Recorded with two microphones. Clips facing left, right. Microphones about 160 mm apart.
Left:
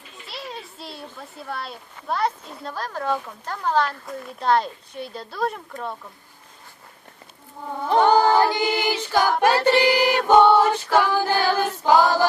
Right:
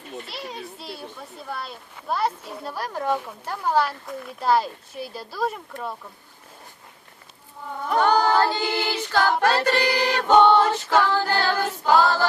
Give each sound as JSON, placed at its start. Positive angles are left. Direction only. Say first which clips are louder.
{"t": 0.3, "sound": "a child's voice", "louder": "right 1 dB", "side_deg": 0}
{"t": 7.9, "sound": "child singing", "louder": "left 3 dB", "side_deg": 20}
{"t": 9.0, "sound": "a capella", "louder": "left 1 dB", "side_deg": 15}
{"t": 9.4, "sound": "music", "louder": "left 3 dB", "side_deg": 15}